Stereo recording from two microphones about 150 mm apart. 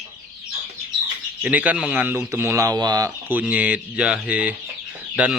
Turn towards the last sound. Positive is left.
turn(degrees=-5)  # may be behind; listen again after turning